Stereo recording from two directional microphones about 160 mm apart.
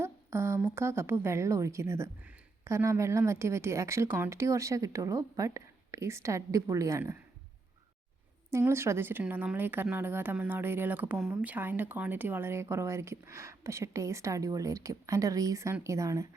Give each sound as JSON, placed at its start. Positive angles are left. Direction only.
{"t": 0.0, "sound": "a woman's voice", "side_deg": -15}
{"t": 8.4, "sound": "a woman's voice", "side_deg": -15}